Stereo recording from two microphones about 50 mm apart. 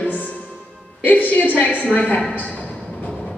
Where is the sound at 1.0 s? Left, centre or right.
Left.